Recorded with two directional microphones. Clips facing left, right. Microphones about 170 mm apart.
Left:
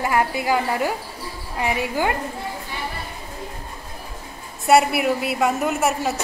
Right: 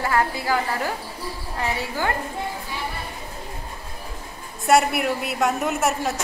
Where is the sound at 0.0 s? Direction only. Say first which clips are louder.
Left 2 dB; 15° left (ahead or behind).